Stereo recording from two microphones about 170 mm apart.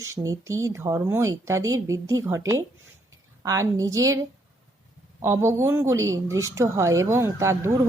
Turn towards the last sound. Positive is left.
turn(degrees=-15)  # may be behind; listen again after turning